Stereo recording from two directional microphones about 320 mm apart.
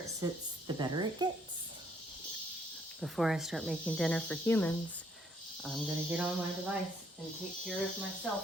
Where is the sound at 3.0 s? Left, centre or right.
Centre.